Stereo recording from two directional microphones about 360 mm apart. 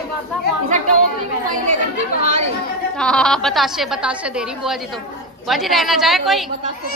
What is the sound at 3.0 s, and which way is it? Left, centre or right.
A woman's voice, centre.